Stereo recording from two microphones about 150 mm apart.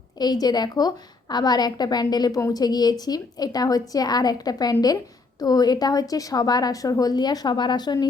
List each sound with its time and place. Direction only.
0.2 s a woman's voice: 25° left (ahead or behind)